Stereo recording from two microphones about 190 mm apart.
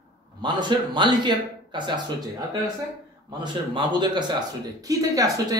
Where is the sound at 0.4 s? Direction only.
25° right (ahead or behind).